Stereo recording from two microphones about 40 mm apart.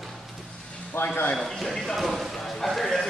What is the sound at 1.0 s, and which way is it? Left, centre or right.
Speech, left.